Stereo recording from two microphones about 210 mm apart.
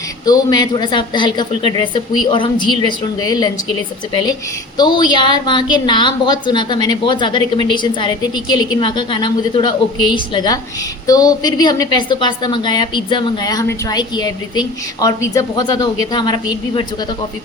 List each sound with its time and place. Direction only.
0.3 s a woman's voice: 20° left (ahead or behind)